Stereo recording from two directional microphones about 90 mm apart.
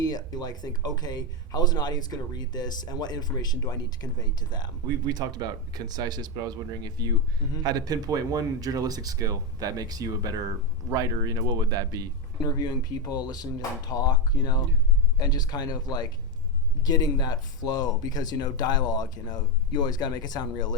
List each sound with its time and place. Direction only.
0.0 s speech: 45° left (ahead or behind)
5.0 s speech: 50° right (ahead or behind)
12.5 s speech: 45° left (ahead or behind)